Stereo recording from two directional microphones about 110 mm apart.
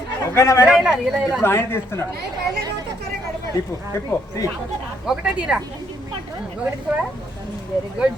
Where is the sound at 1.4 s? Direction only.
20° left (ahead or behind).